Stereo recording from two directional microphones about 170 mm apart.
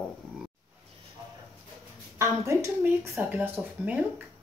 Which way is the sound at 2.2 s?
15° right (ahead or behind).